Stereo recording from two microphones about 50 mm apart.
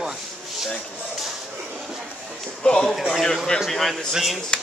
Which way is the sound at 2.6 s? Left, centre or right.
Centre.